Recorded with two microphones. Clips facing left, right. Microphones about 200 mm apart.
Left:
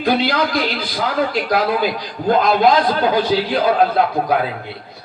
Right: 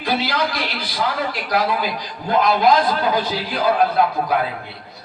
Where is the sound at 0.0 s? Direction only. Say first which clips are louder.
Left 4 dB; 50° left (ahead or behind).